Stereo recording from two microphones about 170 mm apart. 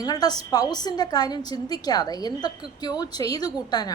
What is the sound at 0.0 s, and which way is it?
A woman's voice, 25° left (ahead or behind).